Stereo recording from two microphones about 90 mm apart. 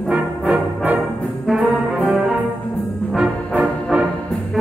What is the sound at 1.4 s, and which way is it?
Brass instrument, centre (ahead or behind).